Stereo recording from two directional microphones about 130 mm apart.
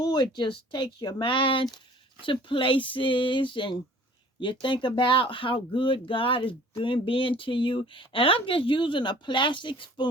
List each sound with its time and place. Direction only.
0.0 s speech: 35° left (ahead or behind)